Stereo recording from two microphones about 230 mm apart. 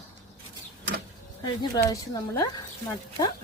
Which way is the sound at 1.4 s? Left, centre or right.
Centre.